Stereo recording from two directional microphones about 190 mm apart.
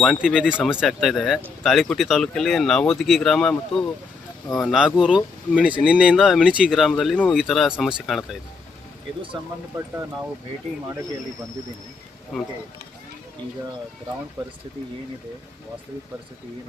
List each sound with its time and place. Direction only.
0.0 s speech: centre (ahead or behind)
9.3 s speech: 20° right (ahead or behind)
14.4 s speech: 15° right (ahead or behind)